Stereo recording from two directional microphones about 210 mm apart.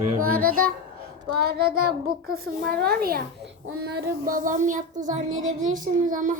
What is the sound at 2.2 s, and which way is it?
A woman's voice, 45° right (ahead or behind).